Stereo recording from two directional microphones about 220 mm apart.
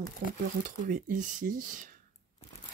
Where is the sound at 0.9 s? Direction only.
35° right (ahead or behind).